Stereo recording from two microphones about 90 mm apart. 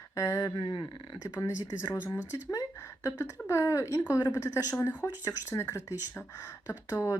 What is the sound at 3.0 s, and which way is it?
Speech, 35° left (ahead or behind).